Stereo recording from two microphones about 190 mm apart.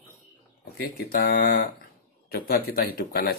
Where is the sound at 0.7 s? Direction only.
55° left (ahead or behind).